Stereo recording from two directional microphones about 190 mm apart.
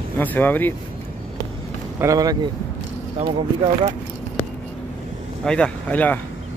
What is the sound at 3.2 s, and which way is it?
Speech, 30° right (ahead or behind).